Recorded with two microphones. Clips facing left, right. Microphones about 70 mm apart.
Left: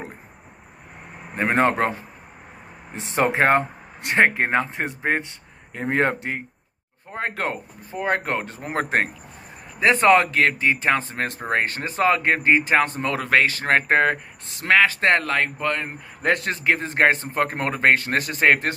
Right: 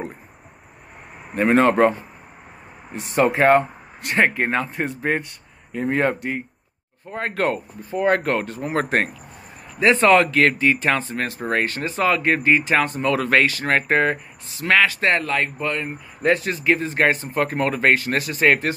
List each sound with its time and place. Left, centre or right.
1.3 s speech: left
1.7 s a man's voice: centre
2.9 s a man's voice: left
5.7 s a man's voice: left
7.1 s speech: left
9.8 s speech: left
13.1 s speech: centre
13.5 s a man's voice: left